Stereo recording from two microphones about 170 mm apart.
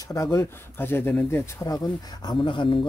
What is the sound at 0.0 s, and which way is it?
Speech, 20° left (ahead or behind).